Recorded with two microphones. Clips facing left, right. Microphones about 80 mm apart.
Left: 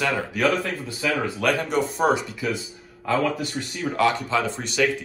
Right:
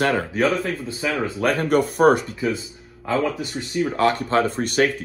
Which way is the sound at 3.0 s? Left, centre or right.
Right.